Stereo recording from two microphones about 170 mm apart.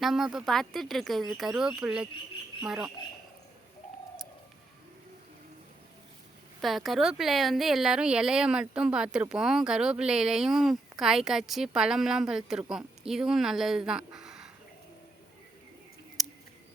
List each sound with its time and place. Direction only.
0.0 s speech: centre (ahead or behind)
6.6 s speech: centre (ahead or behind)
16.2 s mouse: centre (ahead or behind)